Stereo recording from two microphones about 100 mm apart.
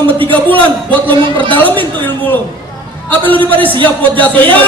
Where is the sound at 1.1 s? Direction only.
55° right (ahead or behind).